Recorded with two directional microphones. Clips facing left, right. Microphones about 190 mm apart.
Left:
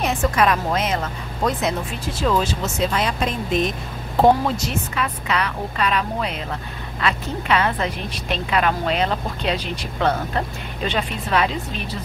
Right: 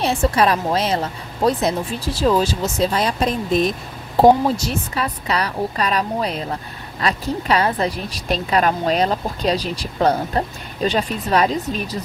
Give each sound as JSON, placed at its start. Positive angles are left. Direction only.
{"t": 0.0, "sound": "a woman's voice", "side_deg": -30}